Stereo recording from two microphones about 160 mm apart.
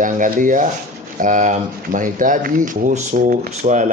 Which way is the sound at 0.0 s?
55° right (ahead or behind).